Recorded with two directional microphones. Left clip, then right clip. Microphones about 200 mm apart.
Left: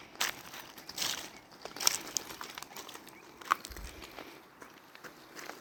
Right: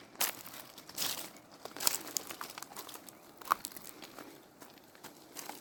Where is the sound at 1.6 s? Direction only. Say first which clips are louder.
Left 4 dB; centre (ahead or behind).